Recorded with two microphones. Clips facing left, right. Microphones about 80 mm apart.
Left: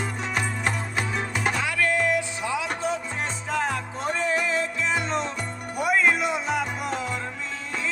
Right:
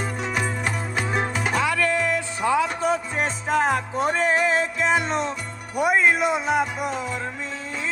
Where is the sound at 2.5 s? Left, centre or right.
Right.